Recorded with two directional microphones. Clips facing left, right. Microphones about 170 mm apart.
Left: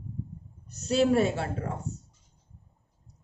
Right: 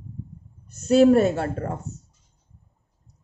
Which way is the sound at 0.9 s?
45° right (ahead or behind).